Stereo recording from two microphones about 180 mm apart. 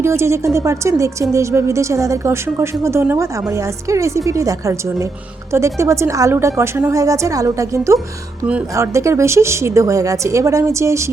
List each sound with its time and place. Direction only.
0.0 s speech: 15° right (ahead or behind)